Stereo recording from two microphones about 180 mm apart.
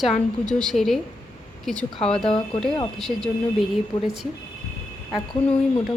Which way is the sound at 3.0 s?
Centre (ahead or behind).